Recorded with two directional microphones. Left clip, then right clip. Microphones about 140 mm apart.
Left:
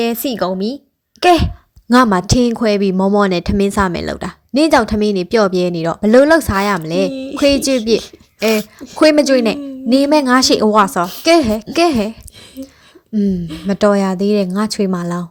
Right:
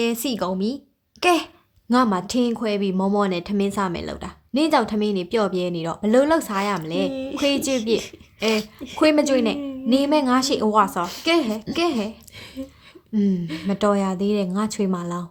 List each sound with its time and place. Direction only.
0.0 s speech: 25° left (ahead or behind)
1.9 s a woman's voice: 55° left (ahead or behind)
8.5 s speech: 30° left (ahead or behind)
9.0 s a woman's voice: 45° left (ahead or behind)
13.1 s a woman's voice: 25° left (ahead or behind); by 15.3 s 40° left (ahead or behind)